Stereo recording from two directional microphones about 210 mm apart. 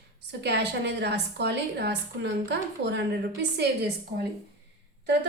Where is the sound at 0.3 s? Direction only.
55° right (ahead or behind).